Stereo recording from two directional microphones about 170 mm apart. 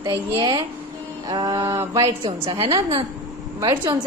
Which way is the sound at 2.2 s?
30° right (ahead or behind).